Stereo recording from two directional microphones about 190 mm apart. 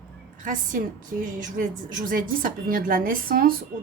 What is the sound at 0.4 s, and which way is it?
Speech, 45° right (ahead or behind).